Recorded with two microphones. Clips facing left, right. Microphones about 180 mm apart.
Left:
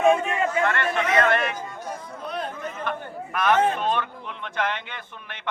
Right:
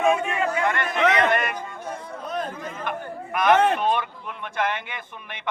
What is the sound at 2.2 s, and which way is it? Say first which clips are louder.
Chatter: right 1 dB; 45° right (ahead or behind).